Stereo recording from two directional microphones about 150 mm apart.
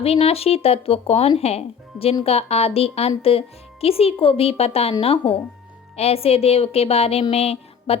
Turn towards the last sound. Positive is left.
turn(degrees=40)  # may be behind; listen again after turning